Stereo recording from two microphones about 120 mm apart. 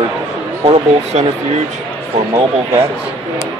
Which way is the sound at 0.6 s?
65° right (ahead or behind).